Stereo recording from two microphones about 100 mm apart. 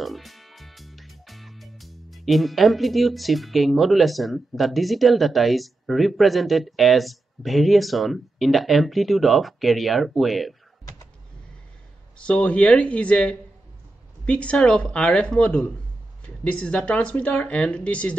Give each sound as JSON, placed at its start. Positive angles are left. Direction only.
{"t": 0.0, "sound": "speech", "side_deg": 0}
{"t": 12.2, "sound": "speech", "side_deg": 10}